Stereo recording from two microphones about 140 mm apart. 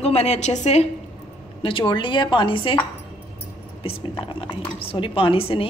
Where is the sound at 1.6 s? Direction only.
35° left (ahead or behind).